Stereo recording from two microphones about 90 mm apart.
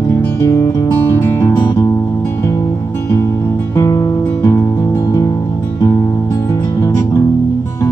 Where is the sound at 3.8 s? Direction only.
35° left (ahead or behind).